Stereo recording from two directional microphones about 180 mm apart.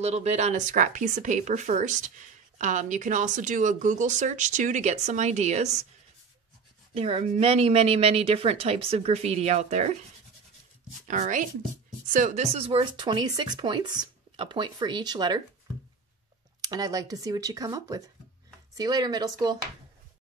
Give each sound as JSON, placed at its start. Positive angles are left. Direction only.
{"t": 0.0, "sound": "speech", "side_deg": -40}
{"t": 6.9, "sound": "speech", "side_deg": -35}
{"t": 11.1, "sound": "speech", "side_deg": -45}
{"t": 16.6, "sound": "speech", "side_deg": -20}